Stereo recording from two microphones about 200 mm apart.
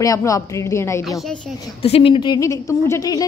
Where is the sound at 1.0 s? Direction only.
Centre (ahead or behind).